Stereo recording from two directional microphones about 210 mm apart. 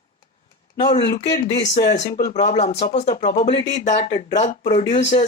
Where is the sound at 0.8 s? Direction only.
20° left (ahead or behind).